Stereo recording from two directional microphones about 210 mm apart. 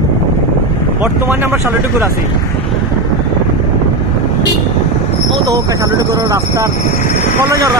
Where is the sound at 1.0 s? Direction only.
10° right (ahead or behind).